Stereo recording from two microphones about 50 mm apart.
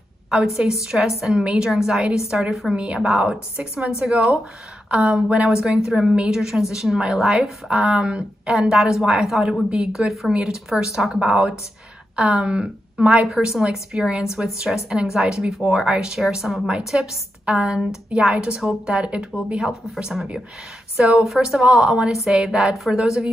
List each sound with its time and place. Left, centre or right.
0.3 s speech: centre
1.4 s a woman's voice: centre
1.7 s a woman's voice: centre
4.8 s a woman's voice: right
18.3 s a woman's voice: right
19.6 s a woman's voice: centre
22.1 s a woman's voice: centre